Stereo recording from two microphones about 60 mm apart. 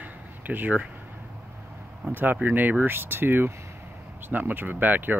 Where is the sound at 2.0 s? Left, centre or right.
Centre.